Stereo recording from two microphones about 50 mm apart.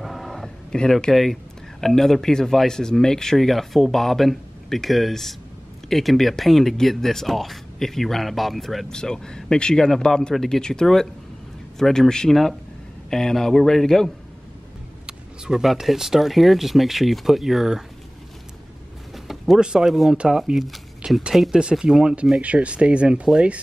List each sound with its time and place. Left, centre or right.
0.0 s a sound: centre
0.7 s speech: centre
1.1 s speech: centre
8.8 s speech: centre
15.0 s vehicle: centre
15.6 s speech: centre
19.1 s a sound: centre
19.9 s speech: centre
22.4 s speech: right